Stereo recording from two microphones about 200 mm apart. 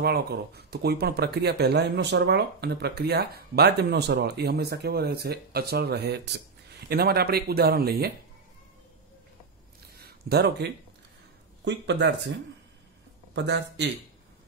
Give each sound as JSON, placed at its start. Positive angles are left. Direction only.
{"t": 0.0, "sound": "speech", "side_deg": -55}
{"t": 9.9, "sound": "a sound", "side_deg": -50}
{"t": 11.6, "sound": "speech", "side_deg": -60}
{"t": 13.3, "sound": "speech", "side_deg": -60}